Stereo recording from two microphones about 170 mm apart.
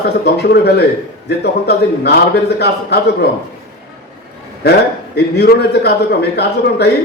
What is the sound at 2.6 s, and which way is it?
Speech, 75° left (ahead or behind).